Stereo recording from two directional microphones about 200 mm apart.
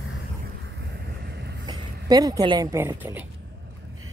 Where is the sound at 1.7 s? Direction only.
20° right (ahead or behind).